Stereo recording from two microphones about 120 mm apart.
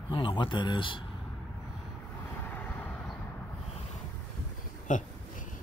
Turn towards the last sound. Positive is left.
turn(degrees=90)